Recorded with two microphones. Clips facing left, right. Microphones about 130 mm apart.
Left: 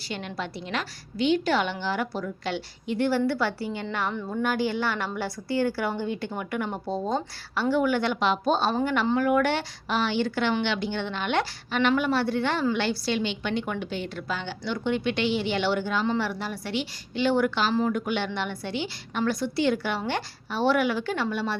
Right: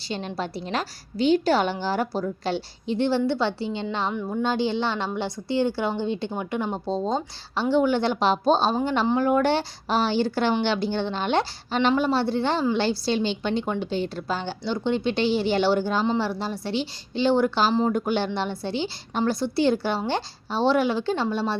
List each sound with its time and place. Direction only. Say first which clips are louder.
0.1 s a woman's voice: right 4 dB; 30° right (ahead or behind)